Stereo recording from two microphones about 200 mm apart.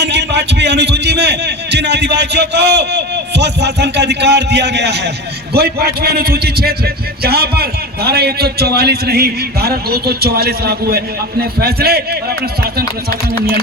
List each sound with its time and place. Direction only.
0.0 s a man's voice: 60° right (ahead or behind)